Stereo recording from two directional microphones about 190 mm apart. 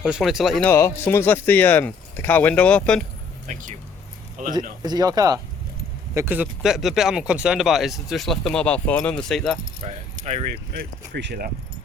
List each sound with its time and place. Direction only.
0.0 s speech: centre (ahead or behind)
0.7 s speech: 15° left (ahead or behind)
3.4 s speech: 40° right (ahead or behind)
4.8 s speech: 20° right (ahead or behind); by 9.6 s 5° left (ahead or behind)
9.8 s speech: 35° right (ahead or behind)
10.5 s speech: 55° right (ahead or behind)